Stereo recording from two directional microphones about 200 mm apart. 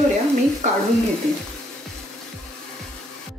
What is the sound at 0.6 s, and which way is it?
Speech, 35° right (ahead or behind).